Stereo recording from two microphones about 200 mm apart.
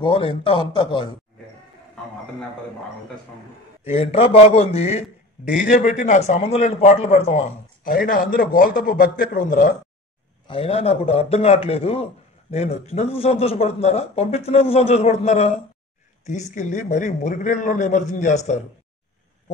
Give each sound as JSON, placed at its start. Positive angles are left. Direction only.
{"t": 0.0, "sound": "a man's voice", "side_deg": 25}
{"t": 3.9, "sound": "a man's voice", "side_deg": 30}
{"t": 5.6, "sound": "a man's voice", "side_deg": 45}
{"t": 10.5, "sound": "a man's voice", "side_deg": 30}